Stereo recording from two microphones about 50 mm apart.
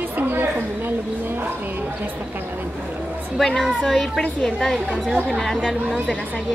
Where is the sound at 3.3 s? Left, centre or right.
Centre.